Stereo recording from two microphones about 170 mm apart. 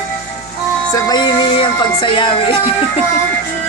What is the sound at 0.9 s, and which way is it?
Music, 25° left (ahead or behind).